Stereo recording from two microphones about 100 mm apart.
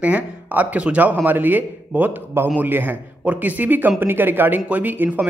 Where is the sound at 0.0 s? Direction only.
15° right (ahead or behind).